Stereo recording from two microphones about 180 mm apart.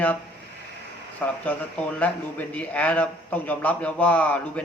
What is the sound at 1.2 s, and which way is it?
A man's voice, 10° left (ahead or behind).